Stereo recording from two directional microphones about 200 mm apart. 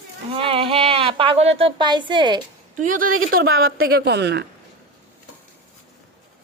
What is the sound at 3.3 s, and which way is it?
A woman's voice, 50° right (ahead or behind).